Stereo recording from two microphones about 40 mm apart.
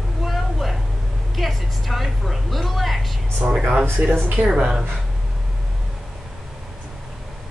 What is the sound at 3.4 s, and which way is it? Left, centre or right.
Speech, centre.